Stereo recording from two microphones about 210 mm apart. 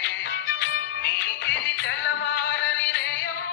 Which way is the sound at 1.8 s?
60° left (ahead or behind).